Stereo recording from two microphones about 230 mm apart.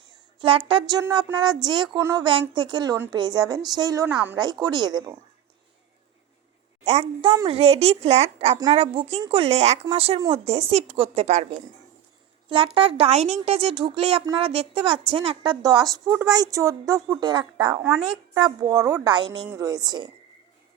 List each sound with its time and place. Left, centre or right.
0.3 s a woman's voice: right
6.8 s a woman's voice: right
12.5 s a woman's voice: right